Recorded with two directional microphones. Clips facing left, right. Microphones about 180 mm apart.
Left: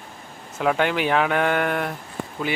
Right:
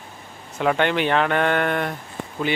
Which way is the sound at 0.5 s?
5° left (ahead or behind).